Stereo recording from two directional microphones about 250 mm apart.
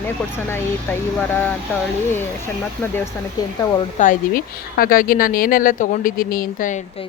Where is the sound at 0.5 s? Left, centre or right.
Centre.